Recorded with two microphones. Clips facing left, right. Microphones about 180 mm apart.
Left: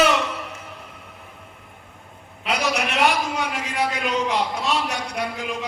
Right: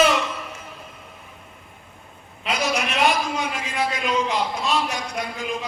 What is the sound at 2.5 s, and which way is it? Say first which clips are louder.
A man's voice: left 1 dB; 70° left (ahead or behind).